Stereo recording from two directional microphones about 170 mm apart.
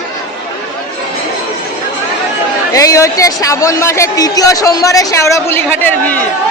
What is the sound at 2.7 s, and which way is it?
Speech, 20° left (ahead or behind).